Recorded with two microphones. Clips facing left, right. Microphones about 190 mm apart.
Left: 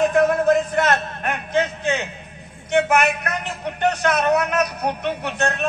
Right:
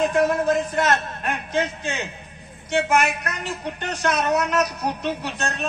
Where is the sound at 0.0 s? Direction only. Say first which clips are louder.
Left 3 dB; 55° left (ahead or behind).